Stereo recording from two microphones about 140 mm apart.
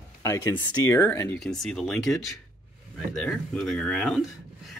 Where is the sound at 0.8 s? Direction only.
15° left (ahead or behind).